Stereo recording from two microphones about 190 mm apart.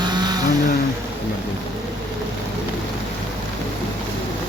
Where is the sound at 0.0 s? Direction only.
20° right (ahead or behind).